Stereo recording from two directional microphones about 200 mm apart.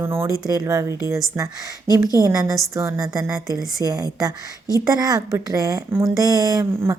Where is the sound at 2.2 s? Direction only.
15° right (ahead or behind).